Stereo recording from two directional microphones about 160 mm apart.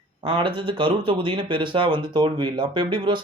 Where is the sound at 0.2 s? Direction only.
30° right (ahead or behind).